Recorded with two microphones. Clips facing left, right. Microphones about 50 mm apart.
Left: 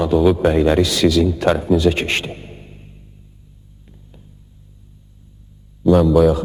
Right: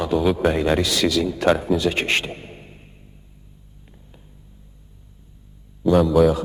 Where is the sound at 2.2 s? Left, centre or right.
Right.